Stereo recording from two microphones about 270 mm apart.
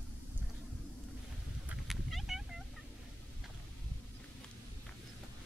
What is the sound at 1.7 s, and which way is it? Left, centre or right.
Cat, centre.